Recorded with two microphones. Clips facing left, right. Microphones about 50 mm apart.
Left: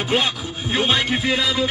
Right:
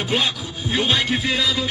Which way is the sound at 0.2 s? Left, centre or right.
Left.